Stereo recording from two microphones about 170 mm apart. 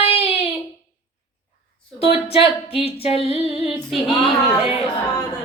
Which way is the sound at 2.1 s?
35° left (ahead or behind).